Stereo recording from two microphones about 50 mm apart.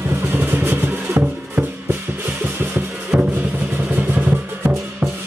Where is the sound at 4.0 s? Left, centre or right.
Right.